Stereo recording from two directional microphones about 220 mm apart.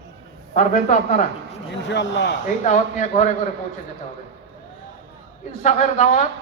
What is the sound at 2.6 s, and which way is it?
Speech, 35° left (ahead or behind).